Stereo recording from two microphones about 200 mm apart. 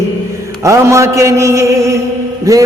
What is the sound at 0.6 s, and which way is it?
Mantra, 15° right (ahead or behind).